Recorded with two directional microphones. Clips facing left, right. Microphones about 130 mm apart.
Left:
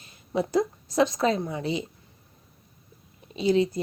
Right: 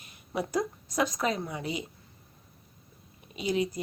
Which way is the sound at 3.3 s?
30° left (ahead or behind).